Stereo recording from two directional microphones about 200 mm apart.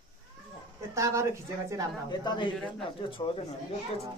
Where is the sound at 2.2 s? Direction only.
20° left (ahead or behind).